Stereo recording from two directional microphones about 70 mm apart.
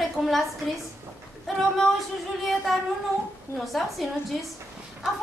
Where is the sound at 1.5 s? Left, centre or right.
Centre.